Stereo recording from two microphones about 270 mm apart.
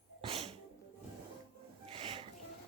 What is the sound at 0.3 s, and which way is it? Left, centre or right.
Sneeze, right.